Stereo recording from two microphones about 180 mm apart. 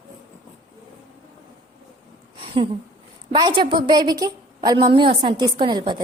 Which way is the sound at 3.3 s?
25° right (ahead or behind).